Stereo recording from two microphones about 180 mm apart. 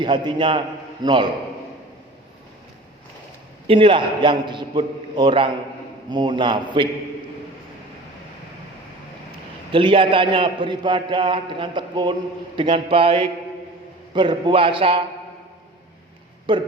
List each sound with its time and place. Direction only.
0.0 s a man's voice: 25° right (ahead or behind)
3.7 s a man's voice: 30° right (ahead or behind)
9.7 s a man's voice: 30° right (ahead or behind)
16.5 s a man's voice: 25° right (ahead or behind)